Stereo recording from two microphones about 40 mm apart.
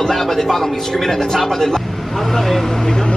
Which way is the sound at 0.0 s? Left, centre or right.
Centre.